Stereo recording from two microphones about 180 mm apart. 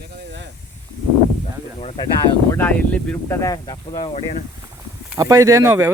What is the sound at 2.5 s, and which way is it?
Speech, 10° left (ahead or behind).